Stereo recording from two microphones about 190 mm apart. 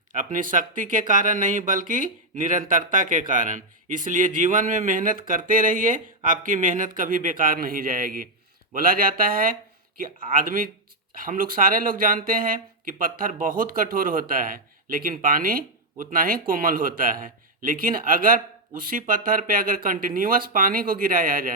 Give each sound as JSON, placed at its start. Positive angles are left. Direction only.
{"t": 0.1, "sound": "speech", "side_deg": -45}